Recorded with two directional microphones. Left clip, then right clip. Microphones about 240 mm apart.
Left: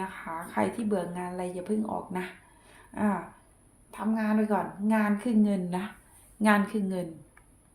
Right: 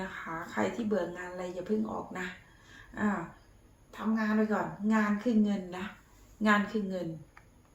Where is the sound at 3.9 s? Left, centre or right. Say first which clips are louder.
Left 2 dB; left.